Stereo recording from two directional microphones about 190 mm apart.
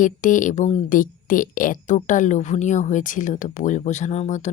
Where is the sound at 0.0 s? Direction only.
45° left (ahead or behind).